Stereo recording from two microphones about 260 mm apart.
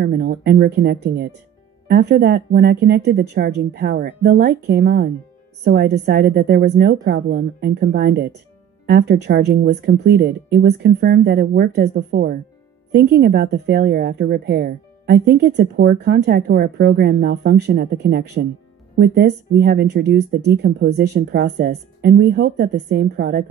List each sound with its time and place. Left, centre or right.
0.0 s speech: right